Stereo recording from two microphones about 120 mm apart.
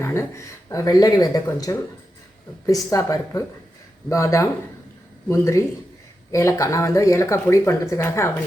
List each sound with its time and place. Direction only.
0.0 s speech: 25° left (ahead or behind)